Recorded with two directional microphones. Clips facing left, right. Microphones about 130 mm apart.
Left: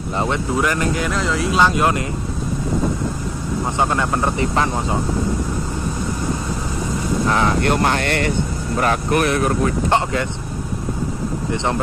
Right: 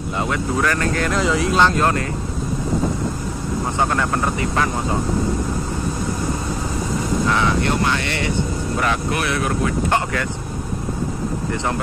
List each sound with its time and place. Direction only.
0.2 s speech: 20° left (ahead or behind)
1.0 s speech: centre (ahead or behind)
3.7 s speech: 20° left (ahead or behind)
7.6 s speech: 50° left (ahead or behind)
9.8 s speech: 25° left (ahead or behind)